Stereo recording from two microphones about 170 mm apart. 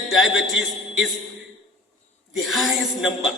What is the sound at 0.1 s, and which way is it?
Speech, centre (ahead or behind).